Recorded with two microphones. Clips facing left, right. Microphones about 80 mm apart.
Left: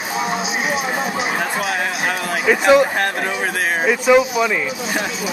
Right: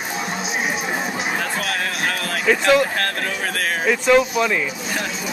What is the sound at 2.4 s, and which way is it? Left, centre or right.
Speech, centre.